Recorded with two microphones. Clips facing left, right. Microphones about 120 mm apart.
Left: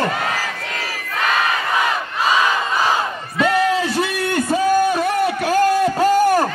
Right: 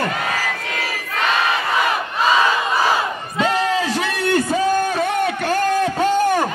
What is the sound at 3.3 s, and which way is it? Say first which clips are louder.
Crowd: left 2 dB; 25° right (ahead or behind).